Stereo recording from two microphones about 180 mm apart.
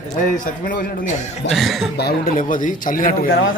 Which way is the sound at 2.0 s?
55° left (ahead or behind).